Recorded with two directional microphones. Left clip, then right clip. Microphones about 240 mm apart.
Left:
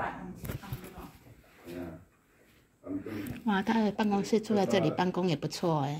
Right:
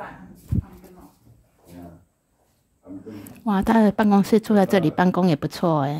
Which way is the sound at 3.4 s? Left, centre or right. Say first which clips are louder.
Right 10 dB; right.